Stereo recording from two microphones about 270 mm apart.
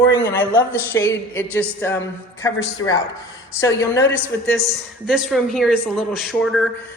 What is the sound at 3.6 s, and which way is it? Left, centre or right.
Speech, centre.